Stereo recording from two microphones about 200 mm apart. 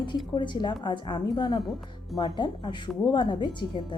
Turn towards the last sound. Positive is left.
turn(degrees=25)  # may be behind; listen again after turning